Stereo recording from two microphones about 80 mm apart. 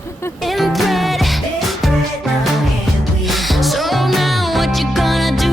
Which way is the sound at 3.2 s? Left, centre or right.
Centre.